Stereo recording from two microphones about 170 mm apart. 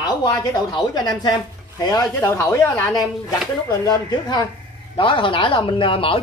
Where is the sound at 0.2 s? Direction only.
20° left (ahead or behind).